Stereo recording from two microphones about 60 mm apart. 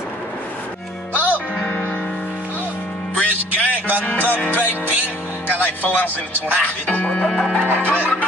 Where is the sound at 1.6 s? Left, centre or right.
Left.